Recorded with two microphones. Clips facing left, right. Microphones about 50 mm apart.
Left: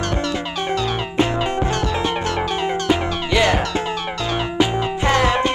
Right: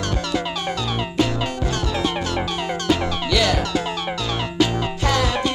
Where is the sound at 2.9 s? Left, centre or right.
Left.